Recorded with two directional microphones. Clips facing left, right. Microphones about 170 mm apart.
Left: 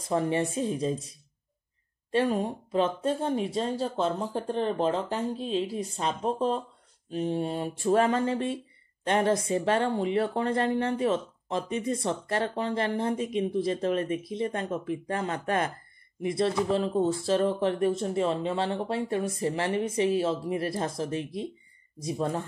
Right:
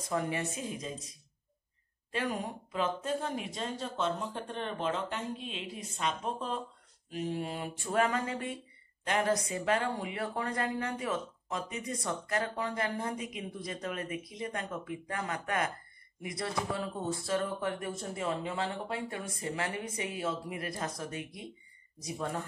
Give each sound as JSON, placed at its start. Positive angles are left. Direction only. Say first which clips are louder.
{"t": 0.1, "sound": "speech", "louder": "left 7 dB", "side_deg": 30}
{"t": 2.1, "sound": "speech", "louder": "left 9 dB", "side_deg": 25}